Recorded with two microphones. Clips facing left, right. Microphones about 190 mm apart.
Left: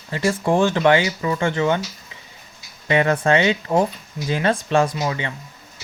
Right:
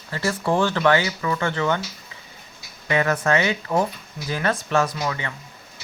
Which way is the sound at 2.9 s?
25° left (ahead or behind).